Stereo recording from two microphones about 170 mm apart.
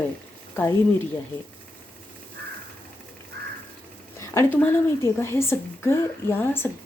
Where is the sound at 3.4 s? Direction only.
65° right (ahead or behind).